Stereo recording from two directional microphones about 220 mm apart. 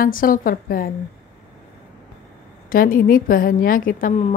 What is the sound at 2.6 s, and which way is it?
Speech, 40° left (ahead or behind).